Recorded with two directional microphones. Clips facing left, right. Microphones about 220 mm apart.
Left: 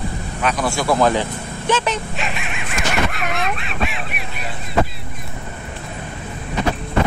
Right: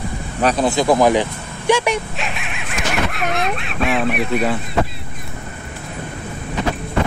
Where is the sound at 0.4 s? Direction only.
35° right (ahead or behind).